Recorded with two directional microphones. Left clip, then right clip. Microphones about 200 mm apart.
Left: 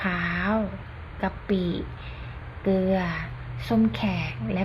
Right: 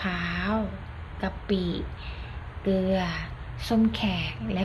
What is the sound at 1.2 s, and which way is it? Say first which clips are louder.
A woman's voice: left 2 dB; 5° left (ahead or behind).